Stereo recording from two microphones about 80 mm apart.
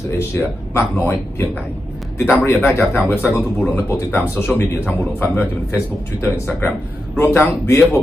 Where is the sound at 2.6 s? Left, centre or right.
Left.